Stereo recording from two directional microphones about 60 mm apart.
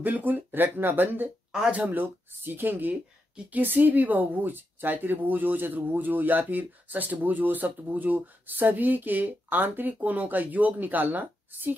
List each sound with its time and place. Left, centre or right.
0.0 s speech: right
1.5 s speech: centre
1.8 s speech: right